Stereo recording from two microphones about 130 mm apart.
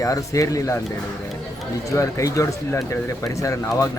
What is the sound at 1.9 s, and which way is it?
Speech, 25° left (ahead or behind).